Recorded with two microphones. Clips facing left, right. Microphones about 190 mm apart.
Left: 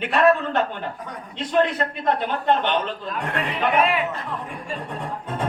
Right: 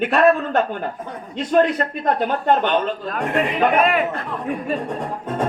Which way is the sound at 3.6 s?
50° right (ahead or behind).